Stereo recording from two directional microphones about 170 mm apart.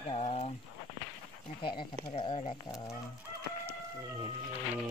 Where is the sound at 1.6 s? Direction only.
30° left (ahead or behind).